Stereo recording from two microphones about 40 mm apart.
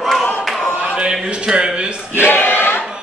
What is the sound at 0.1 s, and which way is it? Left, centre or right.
Clapping, centre.